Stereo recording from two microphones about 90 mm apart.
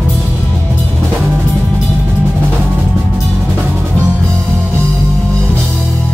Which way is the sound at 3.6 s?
15° right (ahead or behind).